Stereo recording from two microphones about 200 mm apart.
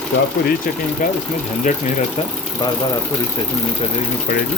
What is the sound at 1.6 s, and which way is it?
Speech, 30° left (ahead or behind).